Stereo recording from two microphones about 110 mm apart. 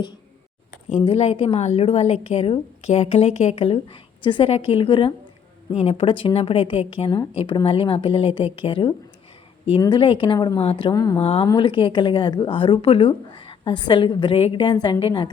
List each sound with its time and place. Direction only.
0.9 s a woman's voice: 60° left (ahead or behind)
5.7 s a woman's voice: 65° left (ahead or behind); by 10.6 s 40° left (ahead or behind)
10.6 s a woman's voice: 55° left (ahead or behind)
10.9 s speech: 35° left (ahead or behind)
11.2 s a woman's voice: 60° left (ahead or behind)
11.5 s a woman's voice: 50° left (ahead or behind)